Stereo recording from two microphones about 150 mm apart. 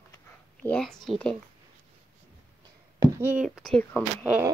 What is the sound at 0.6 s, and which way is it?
Speech, 5° left (ahead or behind).